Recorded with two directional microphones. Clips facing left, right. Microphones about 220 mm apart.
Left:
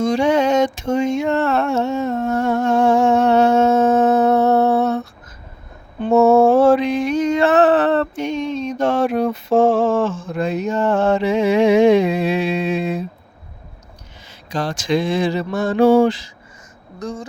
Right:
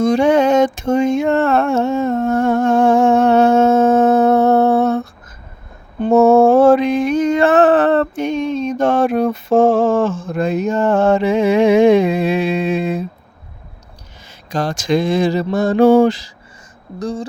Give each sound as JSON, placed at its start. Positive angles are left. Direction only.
{"t": 0.0, "sound": "a sound", "side_deg": -55}
{"t": 6.0, "sound": "mantra", "side_deg": -50}
{"t": 14.5, "sound": "mantra", "side_deg": -45}